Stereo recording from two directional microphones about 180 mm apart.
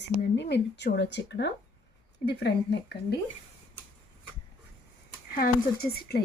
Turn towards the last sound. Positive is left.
turn(degrees=55)  # may be behind; listen again after turning